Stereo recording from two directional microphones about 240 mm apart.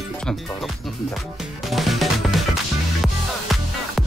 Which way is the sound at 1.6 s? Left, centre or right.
Centre.